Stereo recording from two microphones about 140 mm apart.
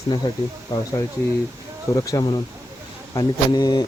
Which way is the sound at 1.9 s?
25° left (ahead or behind).